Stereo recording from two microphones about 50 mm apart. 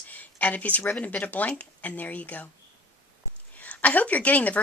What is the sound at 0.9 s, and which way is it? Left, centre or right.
A woman's voice, left.